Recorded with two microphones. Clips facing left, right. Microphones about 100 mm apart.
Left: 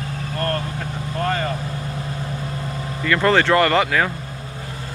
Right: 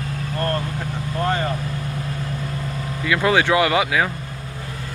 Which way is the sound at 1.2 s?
10° right (ahead or behind).